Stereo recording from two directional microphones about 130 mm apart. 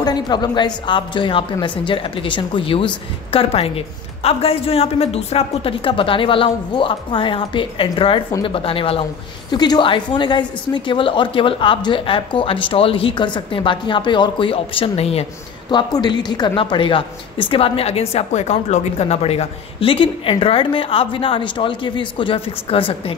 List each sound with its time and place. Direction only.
0.0 s a woman's voice: 35° left (ahead or behind)
9.5 s a woman's voice: 35° left (ahead or behind); by 15.2 s 50° left (ahead or behind)
15.7 s speech: 35° left (ahead or behind)